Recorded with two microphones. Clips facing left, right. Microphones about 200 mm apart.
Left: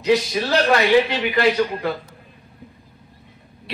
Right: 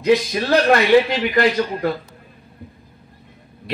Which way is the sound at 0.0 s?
50° right (ahead or behind).